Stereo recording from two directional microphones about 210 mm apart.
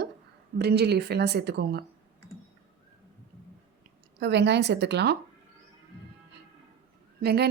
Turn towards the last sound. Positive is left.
turn(degrees=-50)  # may be behind; listen again after turning